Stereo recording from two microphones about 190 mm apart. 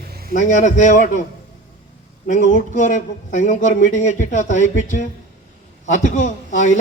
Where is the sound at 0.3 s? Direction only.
40° left (ahead or behind).